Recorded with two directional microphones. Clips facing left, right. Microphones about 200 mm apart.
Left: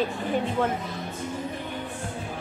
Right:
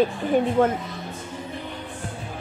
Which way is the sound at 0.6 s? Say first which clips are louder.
Right 6 dB; 50° right (ahead or behind).